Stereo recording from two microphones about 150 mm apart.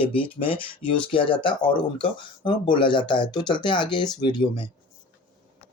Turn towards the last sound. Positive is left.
turn(degrees=30)  # may be behind; listen again after turning